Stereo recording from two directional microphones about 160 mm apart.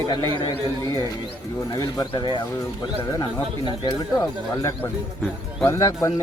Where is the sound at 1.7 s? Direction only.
25° left (ahead or behind).